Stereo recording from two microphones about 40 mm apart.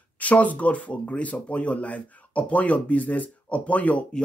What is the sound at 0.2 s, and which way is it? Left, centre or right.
Speech, left.